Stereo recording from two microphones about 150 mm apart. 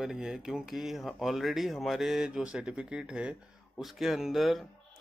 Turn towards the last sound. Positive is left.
turn(degrees=0)  # may be behind; listen again after turning